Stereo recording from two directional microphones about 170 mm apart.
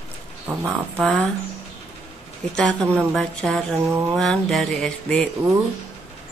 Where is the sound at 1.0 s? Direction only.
Centre (ahead or behind).